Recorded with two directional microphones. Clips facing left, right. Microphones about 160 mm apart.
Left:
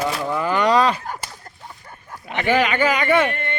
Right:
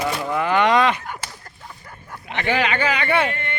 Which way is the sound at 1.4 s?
20° left (ahead or behind).